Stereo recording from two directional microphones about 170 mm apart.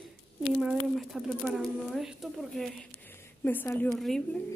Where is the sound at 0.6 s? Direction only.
Centre (ahead or behind).